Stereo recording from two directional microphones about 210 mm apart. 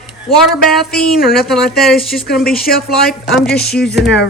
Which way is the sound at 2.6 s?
45° left (ahead or behind).